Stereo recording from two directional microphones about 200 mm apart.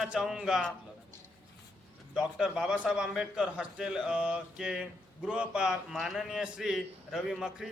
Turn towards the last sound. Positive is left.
turn(degrees=-5)  # may be behind; listen again after turning